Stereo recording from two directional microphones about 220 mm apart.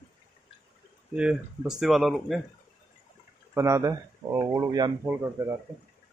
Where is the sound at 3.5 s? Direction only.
15° right (ahead or behind).